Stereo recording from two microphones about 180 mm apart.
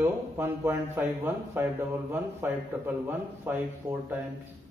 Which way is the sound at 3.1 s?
10° right (ahead or behind).